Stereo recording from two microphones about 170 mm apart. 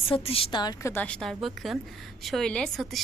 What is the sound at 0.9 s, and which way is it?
A woman's voice, 5° left (ahead or behind).